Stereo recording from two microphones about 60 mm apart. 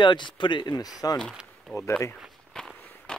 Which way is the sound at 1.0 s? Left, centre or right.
Left.